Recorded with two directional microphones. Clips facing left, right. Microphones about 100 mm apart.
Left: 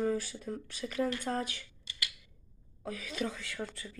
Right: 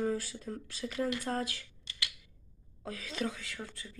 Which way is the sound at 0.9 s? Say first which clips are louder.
Left 1 dB; 5° right (ahead or behind).